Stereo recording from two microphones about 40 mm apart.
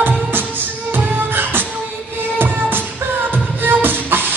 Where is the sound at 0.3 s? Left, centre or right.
Right.